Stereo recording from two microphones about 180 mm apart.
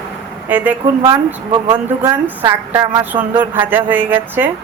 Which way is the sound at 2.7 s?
20° right (ahead or behind).